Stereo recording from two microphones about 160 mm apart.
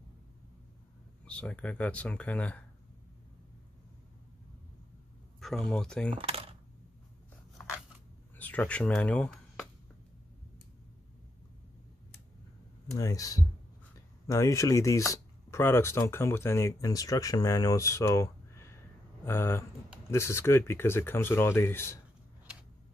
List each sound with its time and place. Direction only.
1.2 s speech: 10° left (ahead or behind)
5.4 s speech: centre (ahead or behind)
6.1 s speech: 35° right (ahead or behind)
8.4 s speech: 10° left (ahead or behind)
12.9 s speech: 20° left (ahead or behind)